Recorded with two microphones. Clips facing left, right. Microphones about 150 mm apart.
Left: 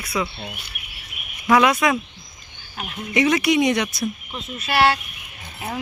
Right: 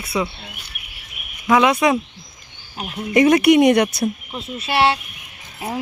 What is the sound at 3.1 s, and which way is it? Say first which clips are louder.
Speech: right 6 dB; 50° right (ahead or behind).